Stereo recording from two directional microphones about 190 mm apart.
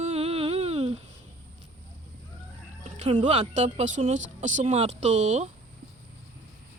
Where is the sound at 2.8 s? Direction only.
35° right (ahead or behind).